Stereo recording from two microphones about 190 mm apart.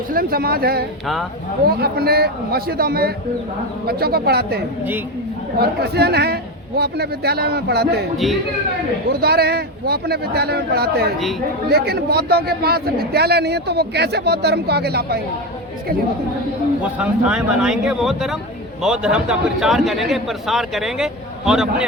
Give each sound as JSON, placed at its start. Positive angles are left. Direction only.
{"t": 0.1, "sound": "a man's voice", "side_deg": -50}
{"t": 8.1, "sound": "a man's voice", "side_deg": 0}
{"t": 9.2, "sound": "a man's voice", "side_deg": -55}
{"t": 17.0, "sound": "a man's voice", "side_deg": -5}